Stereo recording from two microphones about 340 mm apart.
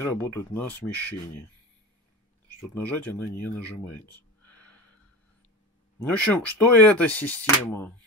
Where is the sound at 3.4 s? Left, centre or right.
Centre.